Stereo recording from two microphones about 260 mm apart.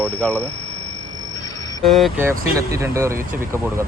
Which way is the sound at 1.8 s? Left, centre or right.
Centre.